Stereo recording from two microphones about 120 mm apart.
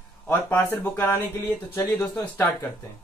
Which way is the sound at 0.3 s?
15° left (ahead or behind).